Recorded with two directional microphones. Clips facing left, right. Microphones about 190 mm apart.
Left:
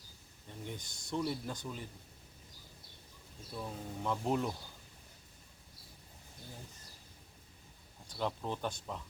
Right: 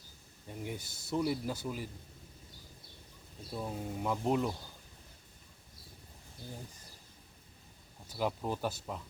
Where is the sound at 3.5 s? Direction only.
20° right (ahead or behind).